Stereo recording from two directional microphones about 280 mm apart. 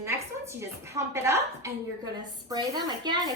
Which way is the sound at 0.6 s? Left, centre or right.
Centre.